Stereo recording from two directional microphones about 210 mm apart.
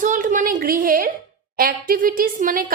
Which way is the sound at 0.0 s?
40° right (ahead or behind).